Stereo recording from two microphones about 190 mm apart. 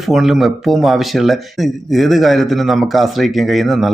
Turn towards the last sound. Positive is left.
turn(degrees=0)  # may be behind; listen again after turning